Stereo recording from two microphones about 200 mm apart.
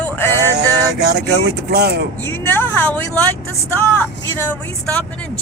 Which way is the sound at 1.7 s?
55° right (ahead or behind).